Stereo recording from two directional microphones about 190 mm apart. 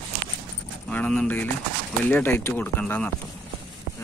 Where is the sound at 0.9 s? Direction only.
5° left (ahead or behind).